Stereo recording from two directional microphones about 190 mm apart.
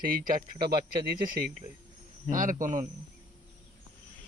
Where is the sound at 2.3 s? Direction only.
45° right (ahead or behind).